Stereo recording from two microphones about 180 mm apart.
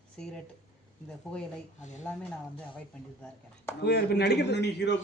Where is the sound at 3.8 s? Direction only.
65° left (ahead or behind).